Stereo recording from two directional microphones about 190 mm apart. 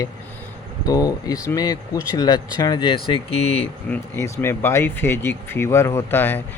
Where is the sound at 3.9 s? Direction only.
10° left (ahead or behind).